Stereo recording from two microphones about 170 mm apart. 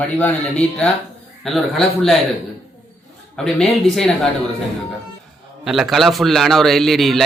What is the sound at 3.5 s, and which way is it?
Speech, 5° left (ahead or behind).